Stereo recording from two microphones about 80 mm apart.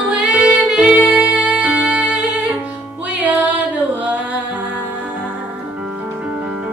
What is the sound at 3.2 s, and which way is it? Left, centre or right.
Music, centre.